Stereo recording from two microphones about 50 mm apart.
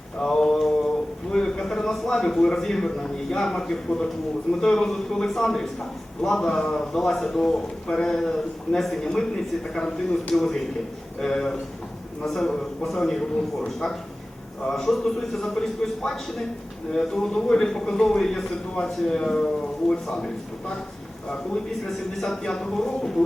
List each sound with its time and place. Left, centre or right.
0.2 s mantra: centre
1.3 s a man's voice: centre
10.3 s a man's voice: centre
21.8 s a man's voice: centre